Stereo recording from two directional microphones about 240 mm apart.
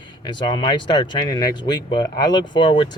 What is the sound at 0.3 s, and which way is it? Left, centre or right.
Speech, centre.